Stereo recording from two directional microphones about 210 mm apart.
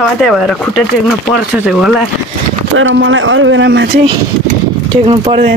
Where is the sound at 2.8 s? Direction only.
65° right (ahead or behind).